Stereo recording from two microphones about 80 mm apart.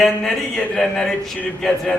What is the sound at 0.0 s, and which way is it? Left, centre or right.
A man's voice, centre.